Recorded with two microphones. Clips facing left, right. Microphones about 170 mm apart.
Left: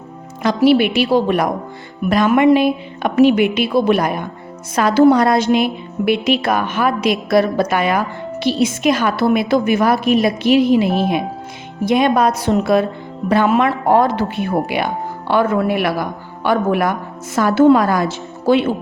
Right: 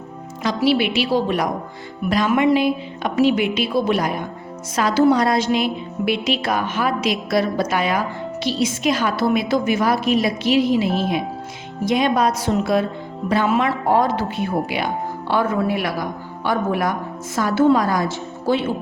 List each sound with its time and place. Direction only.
0.4 s a woman's voice: 50° left (ahead or behind); by 18.6 s 70° left (ahead or behind)